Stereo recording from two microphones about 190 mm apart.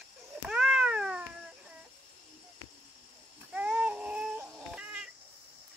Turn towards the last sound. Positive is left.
turn(degrees=-5)  # may be behind; listen again after turning